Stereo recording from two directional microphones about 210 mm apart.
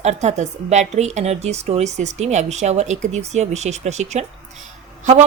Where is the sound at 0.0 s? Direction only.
30° right (ahead or behind).